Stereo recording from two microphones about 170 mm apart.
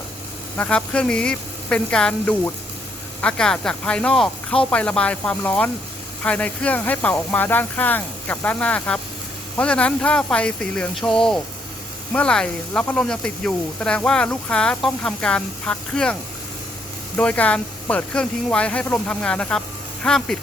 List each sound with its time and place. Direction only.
0.5 s speech: 5° left (ahead or behind)
17.2 s speech: 10° left (ahead or behind)